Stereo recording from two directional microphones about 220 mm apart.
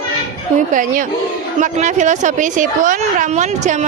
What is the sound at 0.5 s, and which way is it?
A woman's voice, 35° right (ahead or behind).